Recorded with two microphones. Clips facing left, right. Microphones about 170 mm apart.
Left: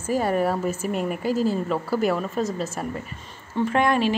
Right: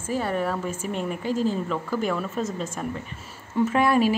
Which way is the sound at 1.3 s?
40° left (ahead or behind).